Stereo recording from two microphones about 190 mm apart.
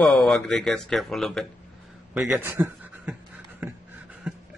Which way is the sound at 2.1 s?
10° right (ahead or behind).